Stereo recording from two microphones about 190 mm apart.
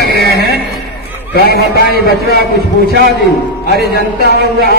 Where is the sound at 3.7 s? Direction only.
60° right (ahead or behind).